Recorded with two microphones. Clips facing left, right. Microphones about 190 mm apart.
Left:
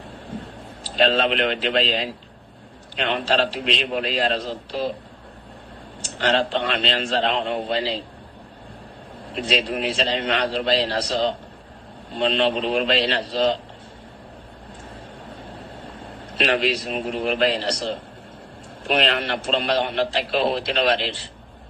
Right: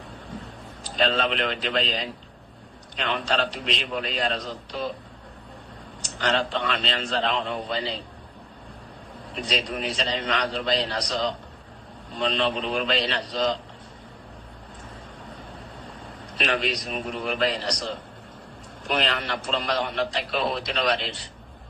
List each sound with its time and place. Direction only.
0.8 s a man's voice: 30° left (ahead or behind)
6.0 s a man's voice: 30° left (ahead or behind)
9.4 s a man's voice: 25° left (ahead or behind)
16.3 s a man's voice: 30° left (ahead or behind)
19.0 s a man's voice: 25° left (ahead or behind)